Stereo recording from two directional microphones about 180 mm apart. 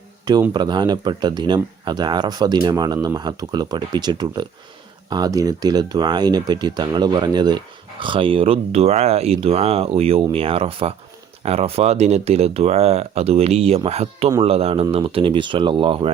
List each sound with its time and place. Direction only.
0.5 s speech: 25° right (ahead or behind)